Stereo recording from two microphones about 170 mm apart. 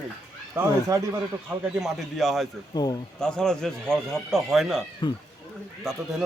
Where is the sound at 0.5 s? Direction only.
20° right (ahead or behind).